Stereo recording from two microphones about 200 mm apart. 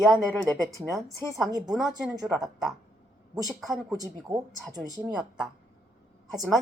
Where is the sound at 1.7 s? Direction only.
Centre (ahead or behind).